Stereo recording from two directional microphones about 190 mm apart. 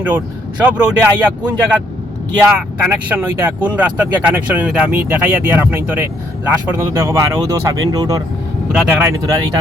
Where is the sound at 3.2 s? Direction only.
10° right (ahead or behind).